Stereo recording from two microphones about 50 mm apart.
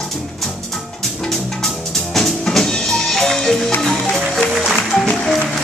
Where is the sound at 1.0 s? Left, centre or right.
Centre.